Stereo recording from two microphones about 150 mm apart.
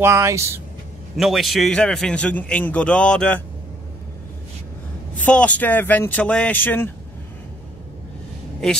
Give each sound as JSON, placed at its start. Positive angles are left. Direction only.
{"t": 0.0, "sound": "speech", "side_deg": -20}
{"t": 1.1, "sound": "a man's voice", "side_deg": 0}
{"t": 5.2, "sound": "speech", "side_deg": 10}